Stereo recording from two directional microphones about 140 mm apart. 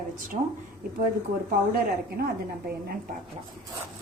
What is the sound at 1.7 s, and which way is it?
Speech, 90° right.